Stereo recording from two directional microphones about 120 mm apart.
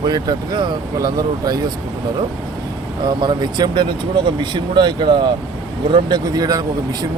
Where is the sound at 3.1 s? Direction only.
40° right (ahead or behind).